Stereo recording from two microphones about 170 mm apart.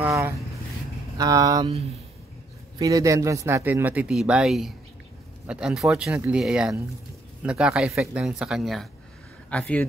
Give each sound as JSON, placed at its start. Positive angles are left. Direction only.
{"t": 0.0, "sound": "speech", "side_deg": -15}
{"t": 2.8, "sound": "speech", "side_deg": -20}